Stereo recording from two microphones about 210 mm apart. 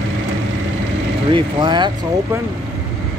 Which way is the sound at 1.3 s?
20° right (ahead or behind).